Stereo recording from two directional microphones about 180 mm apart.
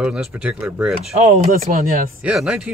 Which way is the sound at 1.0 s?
35° right (ahead or behind).